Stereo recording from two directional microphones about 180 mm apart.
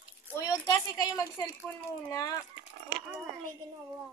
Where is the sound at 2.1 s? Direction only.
20° left (ahead or behind).